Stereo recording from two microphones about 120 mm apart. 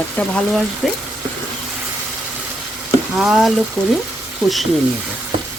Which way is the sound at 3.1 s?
5° right (ahead or behind).